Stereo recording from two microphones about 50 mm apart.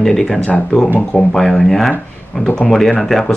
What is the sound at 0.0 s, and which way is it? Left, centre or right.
Speech, centre.